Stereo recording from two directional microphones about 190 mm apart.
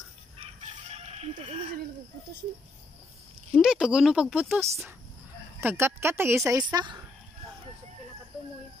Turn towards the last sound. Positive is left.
turn(degrees=-20)  # may be behind; listen again after turning